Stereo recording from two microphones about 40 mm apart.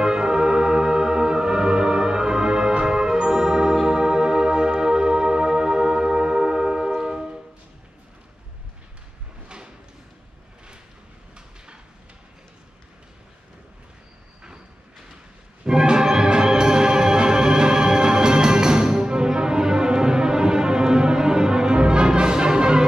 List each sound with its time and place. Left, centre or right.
0.0 s music: centre
11.3 s a sound: right
15.6 s music: centre